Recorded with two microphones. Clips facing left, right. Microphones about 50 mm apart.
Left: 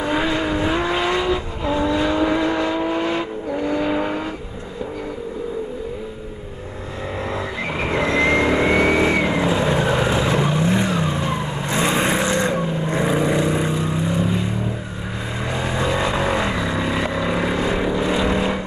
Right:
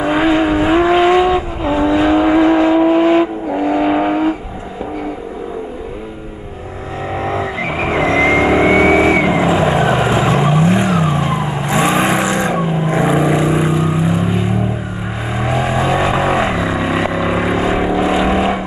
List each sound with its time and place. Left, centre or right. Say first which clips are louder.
0.0 s vehicle: right 7 dB; right
3.5 s vehicle: right 7 dB; right
7.2 s music: right 7 dB; right
7.7 s vehicle: right 5 dB; right
11.9 s vehicle: right 5 dB; right
12.3 s vehicle: right 4 dB; centre